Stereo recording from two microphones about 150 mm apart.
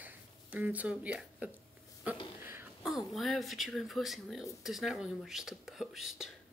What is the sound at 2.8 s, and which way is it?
Speech, centre (ahead or behind).